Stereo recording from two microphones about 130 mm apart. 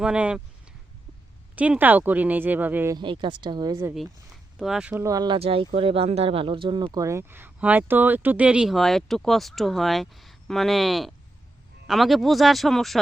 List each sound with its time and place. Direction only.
0.0 s speech: 10° right (ahead or behind)
1.5 s speech: 10° right (ahead or behind)
2.9 s speech: 35° right (ahead or behind)
4.6 s speech: 5° right (ahead or behind)
5.0 s speech: 30° right (ahead or behind)
5.4 s speech: 45° right (ahead or behind); by 13.0 s centre (ahead or behind)